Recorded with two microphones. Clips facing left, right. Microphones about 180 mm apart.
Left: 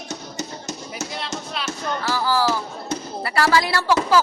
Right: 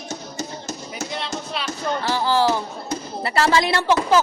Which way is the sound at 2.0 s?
25° right (ahead or behind).